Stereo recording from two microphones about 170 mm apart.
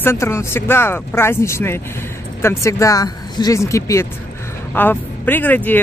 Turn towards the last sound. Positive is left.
turn(degrees=10)  # may be behind; listen again after turning